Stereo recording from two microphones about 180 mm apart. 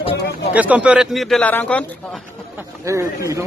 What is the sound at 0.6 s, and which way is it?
Speech, 10° right (ahead or behind).